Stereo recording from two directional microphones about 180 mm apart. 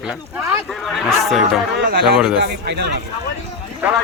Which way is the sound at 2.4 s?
70° right (ahead or behind).